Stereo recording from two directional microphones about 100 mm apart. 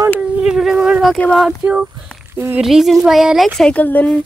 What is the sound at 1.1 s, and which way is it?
Speech, 5° left (ahead or behind).